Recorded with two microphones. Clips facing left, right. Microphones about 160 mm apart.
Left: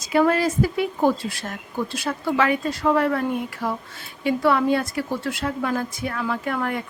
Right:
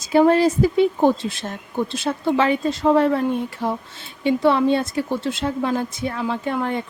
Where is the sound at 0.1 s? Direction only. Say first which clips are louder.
Right 4 dB; 25° right (ahead or behind).